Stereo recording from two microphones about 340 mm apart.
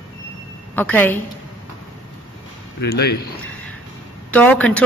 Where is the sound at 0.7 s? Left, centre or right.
Centre.